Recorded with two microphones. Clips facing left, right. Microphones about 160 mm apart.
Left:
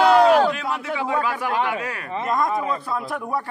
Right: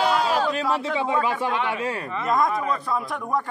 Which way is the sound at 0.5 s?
30° right (ahead or behind).